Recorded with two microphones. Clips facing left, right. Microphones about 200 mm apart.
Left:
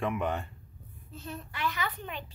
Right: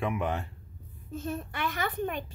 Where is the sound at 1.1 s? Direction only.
50° right (ahead or behind).